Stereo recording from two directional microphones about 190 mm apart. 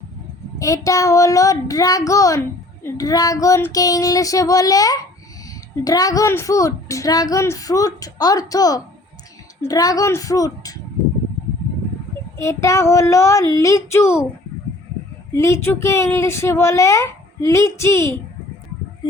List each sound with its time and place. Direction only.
0.6 s a woman's voice: 15° left (ahead or behind)
12.4 s a woman's voice: 15° left (ahead or behind)
15.3 s a woman's voice: 15° left (ahead or behind)